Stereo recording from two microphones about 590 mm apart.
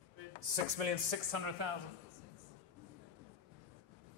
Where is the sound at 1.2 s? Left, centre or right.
Right.